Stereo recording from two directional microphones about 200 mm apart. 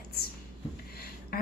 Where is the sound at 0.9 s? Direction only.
50° left (ahead or behind).